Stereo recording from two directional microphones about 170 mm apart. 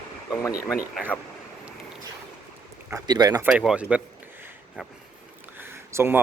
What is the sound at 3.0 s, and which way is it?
Speech, 25° right (ahead or behind).